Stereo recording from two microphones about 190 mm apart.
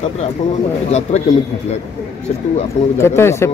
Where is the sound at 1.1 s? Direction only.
35° left (ahead or behind).